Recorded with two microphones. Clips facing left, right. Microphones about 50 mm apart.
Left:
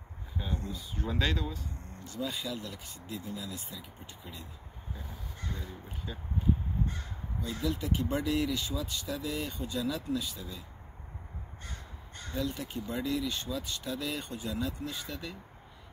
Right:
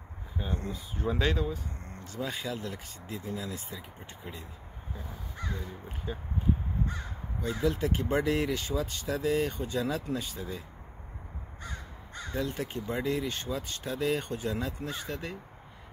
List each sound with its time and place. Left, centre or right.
0.4 s speech: centre
2.1 s speech: right
6.1 s speech: centre
7.4 s speech: right
12.4 s speech: right